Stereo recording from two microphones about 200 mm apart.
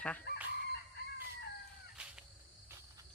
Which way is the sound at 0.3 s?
55° left (ahead or behind).